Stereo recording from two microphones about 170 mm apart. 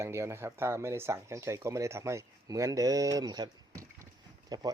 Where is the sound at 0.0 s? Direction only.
15° right (ahead or behind).